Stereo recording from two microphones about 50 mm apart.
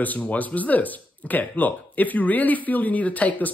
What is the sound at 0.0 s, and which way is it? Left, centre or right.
Speech, left.